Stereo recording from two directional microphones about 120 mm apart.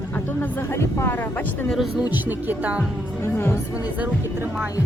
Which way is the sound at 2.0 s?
15° right (ahead or behind).